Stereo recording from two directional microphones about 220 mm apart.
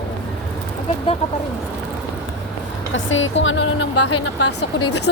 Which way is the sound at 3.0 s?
60° left (ahead or behind).